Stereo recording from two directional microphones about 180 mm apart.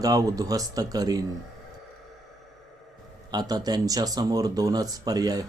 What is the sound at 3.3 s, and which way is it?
Speech, 20° right (ahead or behind).